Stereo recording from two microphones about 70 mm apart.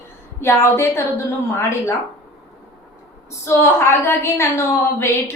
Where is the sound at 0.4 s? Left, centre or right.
Left.